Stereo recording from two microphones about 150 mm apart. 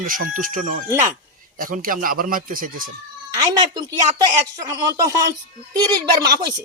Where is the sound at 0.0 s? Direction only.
65° right (ahead or behind).